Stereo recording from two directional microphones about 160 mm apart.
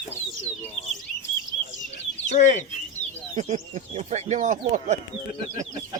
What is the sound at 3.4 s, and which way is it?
Speech, 45° right (ahead or behind).